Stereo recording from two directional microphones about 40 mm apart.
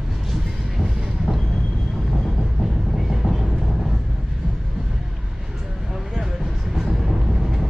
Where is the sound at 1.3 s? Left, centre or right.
Right.